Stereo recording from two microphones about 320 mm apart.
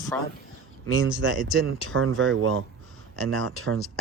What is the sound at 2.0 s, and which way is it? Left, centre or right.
Speech, right.